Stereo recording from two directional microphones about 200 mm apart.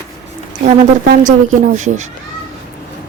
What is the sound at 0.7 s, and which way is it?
A woman's voice, 40° right (ahead or behind).